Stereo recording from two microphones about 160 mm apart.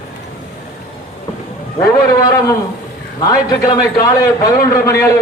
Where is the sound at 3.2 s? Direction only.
25° left (ahead or behind).